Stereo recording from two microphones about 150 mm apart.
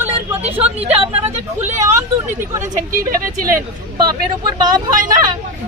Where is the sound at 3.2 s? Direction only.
65° right (ahead or behind).